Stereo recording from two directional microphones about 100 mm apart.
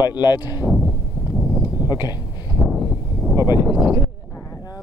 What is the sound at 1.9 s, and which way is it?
Speech, 40° left (ahead or behind).